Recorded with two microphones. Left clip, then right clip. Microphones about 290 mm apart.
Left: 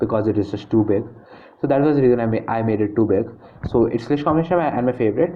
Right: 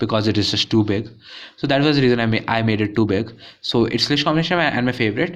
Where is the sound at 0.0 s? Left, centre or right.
Right.